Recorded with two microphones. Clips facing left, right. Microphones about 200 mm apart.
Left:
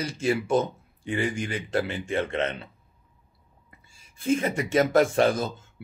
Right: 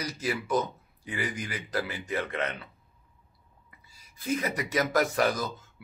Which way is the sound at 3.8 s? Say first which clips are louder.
Left 7 dB; 25° left (ahead or behind).